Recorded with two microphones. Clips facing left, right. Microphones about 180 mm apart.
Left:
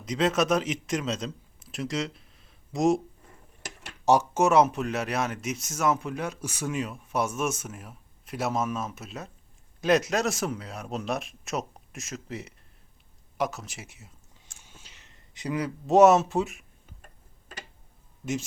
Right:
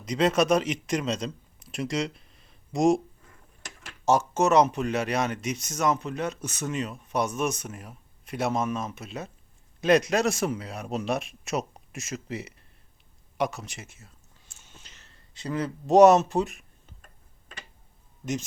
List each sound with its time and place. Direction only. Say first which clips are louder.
0.0 s a man's voice: right 2 dB; centre (ahead or behind)
4.0 s speech: left 1 dB; 15° left (ahead or behind)
13.8 s speech: even; 15° left (ahead or behind)
14.6 s a sound: right 1 dB; 10° left (ahead or behind)
15.9 s speech: right 2 dB; 5° left (ahead or behind)